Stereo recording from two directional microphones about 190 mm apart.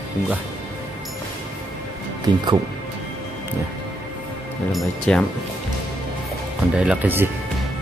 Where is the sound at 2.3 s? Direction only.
20° right (ahead or behind).